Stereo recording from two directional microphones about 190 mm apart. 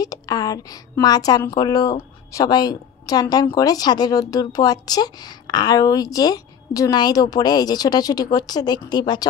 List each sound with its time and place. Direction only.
0.0 s a woman's voice: 20° left (ahead or behind)